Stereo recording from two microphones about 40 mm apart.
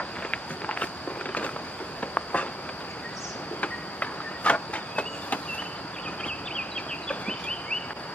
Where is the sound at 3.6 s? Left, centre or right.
Left.